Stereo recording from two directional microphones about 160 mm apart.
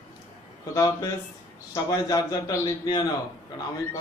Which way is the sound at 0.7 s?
20° left (ahead or behind).